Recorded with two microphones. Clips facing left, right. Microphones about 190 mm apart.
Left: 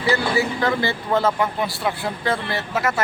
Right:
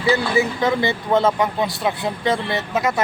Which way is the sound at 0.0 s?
20° right (ahead or behind).